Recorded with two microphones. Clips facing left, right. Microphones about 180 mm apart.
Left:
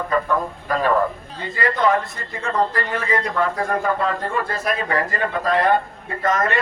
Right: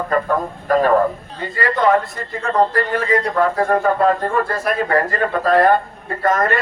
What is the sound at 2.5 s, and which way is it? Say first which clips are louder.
A man's voice: right 5 dB; 45° right (ahead or behind).